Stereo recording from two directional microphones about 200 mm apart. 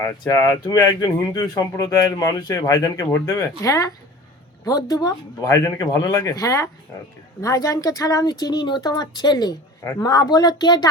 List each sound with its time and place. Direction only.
0.0 s speech: 15° left (ahead or behind)